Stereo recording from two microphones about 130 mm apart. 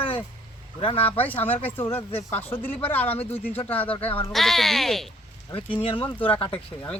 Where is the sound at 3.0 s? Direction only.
50° left (ahead or behind).